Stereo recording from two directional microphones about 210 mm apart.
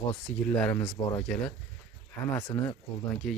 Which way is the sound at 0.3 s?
5° left (ahead or behind).